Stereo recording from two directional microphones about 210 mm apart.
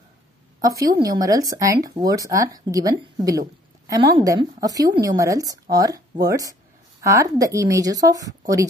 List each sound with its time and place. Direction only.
0.6 s a woman's voice: 15° right (ahead or behind)